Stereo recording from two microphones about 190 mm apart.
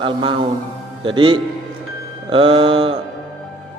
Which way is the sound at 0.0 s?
25° right (ahead or behind).